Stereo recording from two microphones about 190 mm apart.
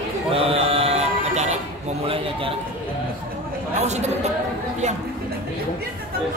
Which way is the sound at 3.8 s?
35° right (ahead or behind).